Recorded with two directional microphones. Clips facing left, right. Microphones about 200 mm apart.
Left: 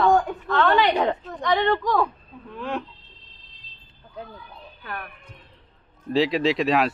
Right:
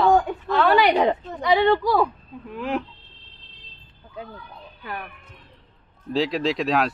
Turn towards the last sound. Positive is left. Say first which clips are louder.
# left 1 dB
turn(degrees=0)  # may be behind; listen again after turning